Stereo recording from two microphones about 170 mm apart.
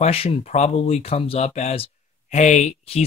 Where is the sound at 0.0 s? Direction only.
35° left (ahead or behind).